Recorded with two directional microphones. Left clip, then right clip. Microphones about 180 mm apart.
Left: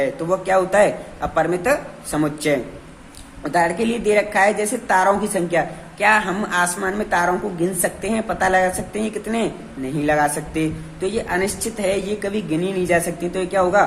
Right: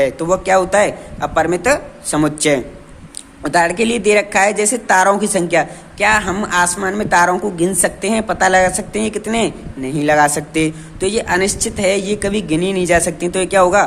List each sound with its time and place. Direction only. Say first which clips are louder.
0.0 s a woman's voice: right 5 dB; 35° right (ahead or behind)